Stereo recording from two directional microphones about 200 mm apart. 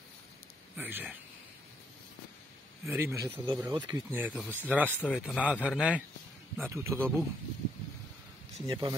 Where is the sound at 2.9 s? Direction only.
15° right (ahead or behind).